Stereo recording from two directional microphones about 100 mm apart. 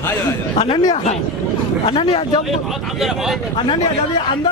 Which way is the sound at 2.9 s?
5° right (ahead or behind).